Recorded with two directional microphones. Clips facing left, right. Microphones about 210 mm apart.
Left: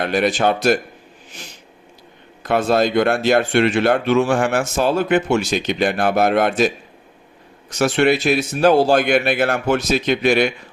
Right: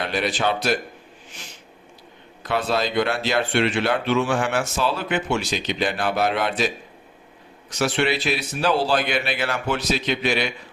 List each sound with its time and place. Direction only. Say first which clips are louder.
0.0 s speech: left 6 dB; 50° left (ahead or behind)
2.4 s speech: left 7 dB; 50° left (ahead or behind)
7.7 s speech: left 6 dB; 45° left (ahead or behind)